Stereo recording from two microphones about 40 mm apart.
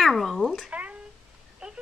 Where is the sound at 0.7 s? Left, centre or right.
Right.